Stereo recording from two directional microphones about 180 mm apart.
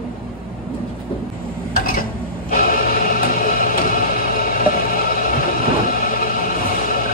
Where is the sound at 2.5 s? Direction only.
50° left (ahead or behind).